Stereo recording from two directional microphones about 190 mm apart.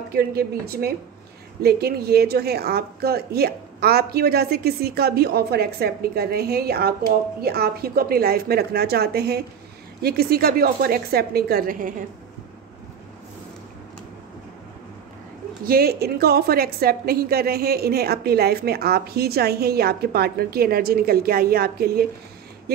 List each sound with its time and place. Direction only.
0.1 s a woman's voice: 55° right (ahead or behind)
15.6 s a woman's voice: 55° right (ahead or behind)